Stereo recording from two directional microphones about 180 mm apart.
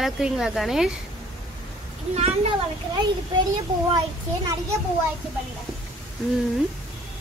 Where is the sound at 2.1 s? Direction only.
40° right (ahead or behind).